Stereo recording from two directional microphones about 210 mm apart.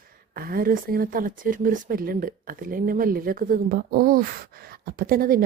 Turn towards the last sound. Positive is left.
turn(degrees=-45)  # may be behind; listen again after turning